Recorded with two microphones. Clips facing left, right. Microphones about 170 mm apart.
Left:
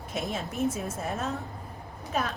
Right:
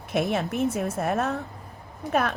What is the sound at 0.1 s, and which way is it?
A woman's voice, 65° right (ahead or behind).